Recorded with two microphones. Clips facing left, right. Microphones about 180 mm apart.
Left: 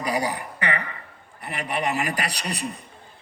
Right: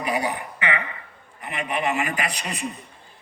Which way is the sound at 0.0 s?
35° left (ahead or behind).